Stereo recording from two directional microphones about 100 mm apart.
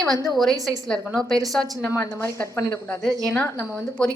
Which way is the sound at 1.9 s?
25° left (ahead or behind).